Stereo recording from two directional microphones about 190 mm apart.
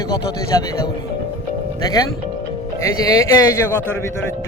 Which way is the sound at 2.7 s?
15° left (ahead or behind).